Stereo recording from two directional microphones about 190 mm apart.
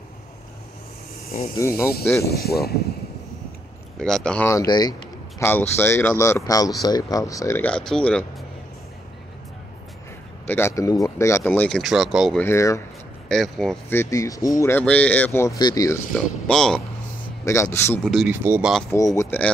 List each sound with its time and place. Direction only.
1.6 s speech: 15° left (ahead or behind)
2.2 s speech: 55° left (ahead or behind)
4.0 s speech: 5° left (ahead or behind)
4.5 s speech: 20° left (ahead or behind)
5.4 s speech: 10° left (ahead or behind)
10.4 s speech: 10° left (ahead or behind)
12.4 s speech: 15° left (ahead or behind)
13.3 s speech: centre (ahead or behind)
13.9 s speech: 15° left (ahead or behind)
16.4 s speech: 5° left (ahead or behind)
17.5 s speech: 15° left (ahead or behind)
18.0 s speech: centre (ahead or behind)
19.1 s speech: 10° left (ahead or behind)